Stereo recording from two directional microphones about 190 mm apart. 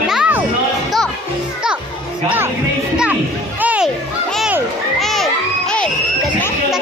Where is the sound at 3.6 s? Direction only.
10° right (ahead or behind).